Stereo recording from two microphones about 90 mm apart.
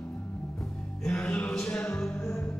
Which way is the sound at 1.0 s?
10° left (ahead or behind).